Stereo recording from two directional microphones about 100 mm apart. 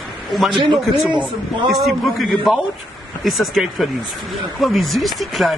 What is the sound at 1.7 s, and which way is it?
A man's voice, centre (ahead or behind).